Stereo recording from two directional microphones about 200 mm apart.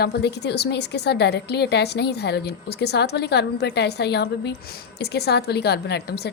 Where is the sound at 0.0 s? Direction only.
55° left (ahead or behind).